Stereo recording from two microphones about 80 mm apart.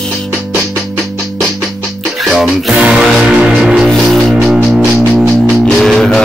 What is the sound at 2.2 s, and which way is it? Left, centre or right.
Music, centre.